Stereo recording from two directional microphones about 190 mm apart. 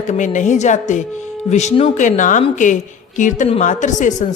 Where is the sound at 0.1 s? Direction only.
40° left (ahead or behind).